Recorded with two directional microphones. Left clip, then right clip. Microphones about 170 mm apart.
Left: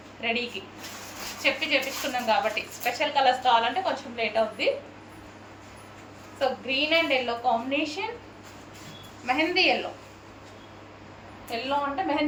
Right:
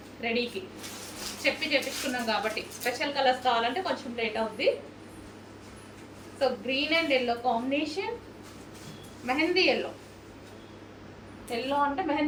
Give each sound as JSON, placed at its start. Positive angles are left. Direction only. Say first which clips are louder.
{"t": 0.2, "sound": "a woman's voice", "louder": "left 2 dB", "side_deg": -5}
{"t": 6.4, "sound": "a woman's voice", "louder": "left 2 dB", "side_deg": -5}
{"t": 9.2, "sound": "a woman's voice", "louder": "left 2 dB", "side_deg": 0}
{"t": 11.5, "sound": "a woman's voice", "louder": "even", "side_deg": -5}